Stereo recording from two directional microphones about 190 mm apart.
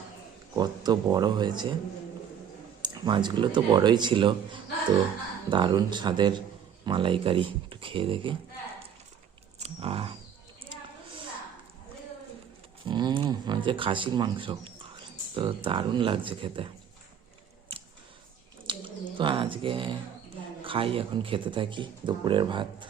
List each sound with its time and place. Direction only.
0.5 s speech: 20° right (ahead or behind)
2.8 s speech: 25° right (ahead or behind)
5.5 s speech: 25° right (ahead or behind)
9.6 s wild animals: 30° right (ahead or behind)
12.8 s speech: 25° right (ahead or behind)
18.6 s bird: 25° right (ahead or behind)
20.7 s speech: 30° right (ahead or behind)